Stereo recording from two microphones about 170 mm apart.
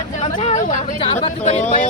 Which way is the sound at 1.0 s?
35° left (ahead or behind).